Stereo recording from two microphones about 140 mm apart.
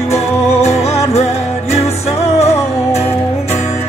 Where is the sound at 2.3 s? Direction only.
50° left (ahead or behind).